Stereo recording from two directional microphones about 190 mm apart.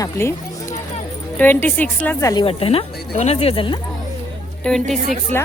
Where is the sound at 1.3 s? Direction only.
10° left (ahead or behind).